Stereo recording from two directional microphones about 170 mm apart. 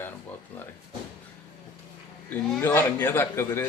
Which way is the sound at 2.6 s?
20° left (ahead or behind).